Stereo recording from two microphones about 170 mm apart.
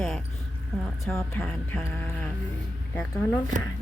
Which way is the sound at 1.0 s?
5° left (ahead or behind).